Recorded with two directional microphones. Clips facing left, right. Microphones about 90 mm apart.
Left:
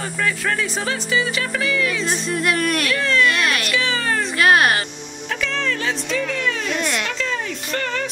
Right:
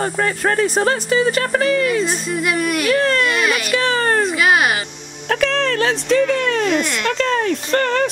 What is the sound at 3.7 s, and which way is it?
Speech, 45° right (ahead or behind).